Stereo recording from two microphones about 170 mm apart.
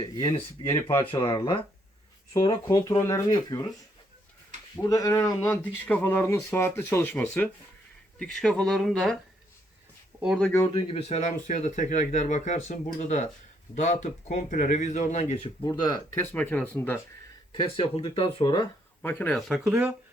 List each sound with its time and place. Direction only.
0.0 s speech: 25° left (ahead or behind)
0.7 s speech: 15° left (ahead or behind)
1.1 s speech: 30° left (ahead or behind)
2.3 s speech: 20° left (ahead or behind)
4.8 s speech: 20° left (ahead or behind); by 9.1 s centre (ahead or behind)
10.2 s speech: 5° right (ahead or behind)
10.4 s speech: 15° left (ahead or behind)
10.9 s speech: 40° left (ahead or behind)
15.6 s speech: 25° left (ahead or behind)
17.6 s speech: 35° left (ahead or behind)
19.0 s speech: 10° left (ahead or behind)
19.5 s speech: 5° right (ahead or behind)